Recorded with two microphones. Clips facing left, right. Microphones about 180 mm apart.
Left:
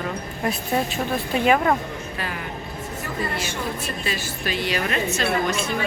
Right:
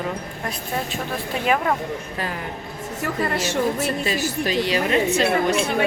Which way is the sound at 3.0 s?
80° right.